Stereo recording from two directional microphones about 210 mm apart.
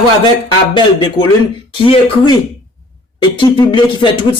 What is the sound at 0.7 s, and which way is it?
Speech, 25° left (ahead or behind).